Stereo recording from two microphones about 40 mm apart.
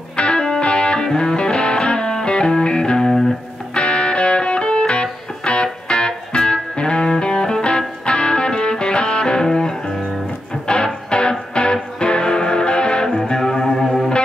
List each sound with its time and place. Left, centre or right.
0.1 s music: left
13.2 s music: centre